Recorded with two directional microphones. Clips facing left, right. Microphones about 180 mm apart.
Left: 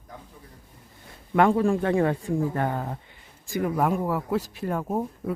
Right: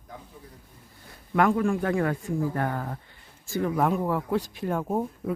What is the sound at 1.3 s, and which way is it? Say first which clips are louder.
Speech: left 2 dB; 25° left (ahead or behind).